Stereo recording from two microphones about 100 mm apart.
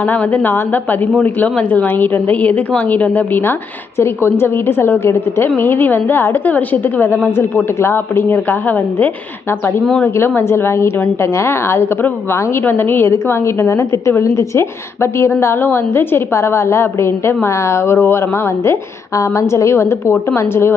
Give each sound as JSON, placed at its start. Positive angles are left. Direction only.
{"t": 0.0, "sound": "a woman's voice", "side_deg": 15}
{"t": 9.8, "sound": "a woman's voice", "side_deg": 10}
{"t": 10.2, "sound": "a woman's voice", "side_deg": 25}